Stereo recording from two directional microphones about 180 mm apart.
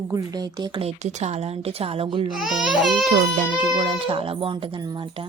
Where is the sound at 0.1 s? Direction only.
20° right (ahead or behind).